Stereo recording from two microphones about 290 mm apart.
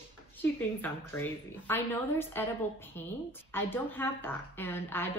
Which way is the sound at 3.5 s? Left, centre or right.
Centre.